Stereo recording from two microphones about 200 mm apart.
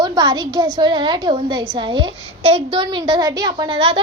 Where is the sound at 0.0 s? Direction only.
25° right (ahead or behind).